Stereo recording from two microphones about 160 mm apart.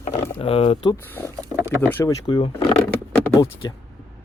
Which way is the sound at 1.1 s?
10° left (ahead or behind).